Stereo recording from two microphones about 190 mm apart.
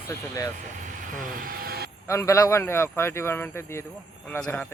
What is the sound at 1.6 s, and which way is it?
Vehicle, 55° right (ahead or behind).